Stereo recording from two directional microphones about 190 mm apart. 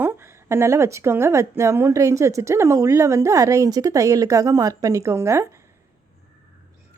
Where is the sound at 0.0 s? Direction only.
10° right (ahead or behind).